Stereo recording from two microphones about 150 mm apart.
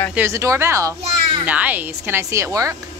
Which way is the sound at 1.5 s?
10° right (ahead or behind).